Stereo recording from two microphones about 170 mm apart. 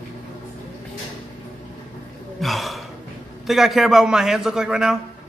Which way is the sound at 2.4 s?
Centre (ahead or behind).